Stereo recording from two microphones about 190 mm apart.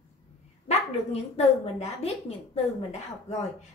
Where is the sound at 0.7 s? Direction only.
35° left (ahead or behind).